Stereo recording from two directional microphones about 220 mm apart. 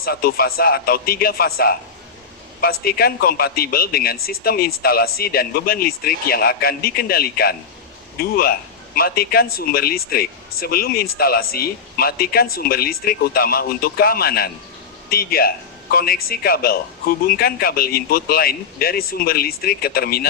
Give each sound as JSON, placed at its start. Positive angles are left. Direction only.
{"t": 0.0, "sound": "speech", "side_deg": 45}